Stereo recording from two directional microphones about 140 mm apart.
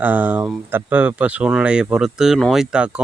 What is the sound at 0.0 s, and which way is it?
Speech, 10° right (ahead or behind).